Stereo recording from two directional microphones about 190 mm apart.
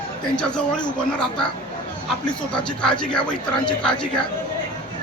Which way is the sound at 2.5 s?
5° left (ahead or behind).